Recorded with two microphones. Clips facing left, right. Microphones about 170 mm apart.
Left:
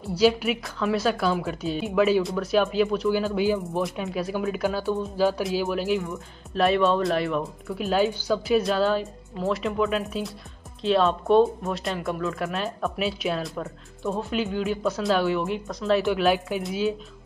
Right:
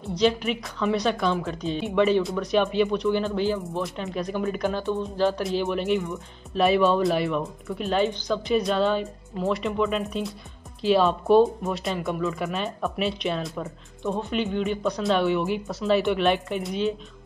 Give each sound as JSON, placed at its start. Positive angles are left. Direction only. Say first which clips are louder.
{"t": 0.0, "sound": "speech", "louder": "left 2 dB", "side_deg": 5}